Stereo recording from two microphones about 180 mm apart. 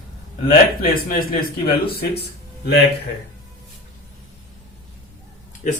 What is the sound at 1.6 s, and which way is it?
Speech, 60° left (ahead or behind).